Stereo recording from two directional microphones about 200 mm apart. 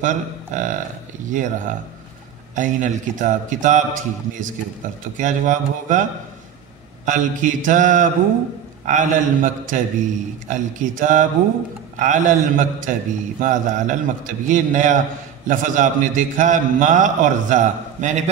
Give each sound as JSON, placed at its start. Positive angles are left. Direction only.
{"t": 0.0, "sound": "a man's voice", "side_deg": -40}
{"t": 2.5, "sound": "a man's voice", "side_deg": -40}
{"t": 7.1, "sound": "a man's voice", "side_deg": -40}